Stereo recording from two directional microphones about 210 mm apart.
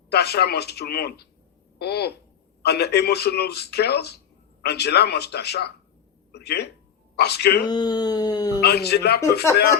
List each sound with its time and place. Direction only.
0.1 s a man's voice: 50° left (ahead or behind)
7.7 s speech: 20° left (ahead or behind)
8.6 s a man's voice: 50° left (ahead or behind)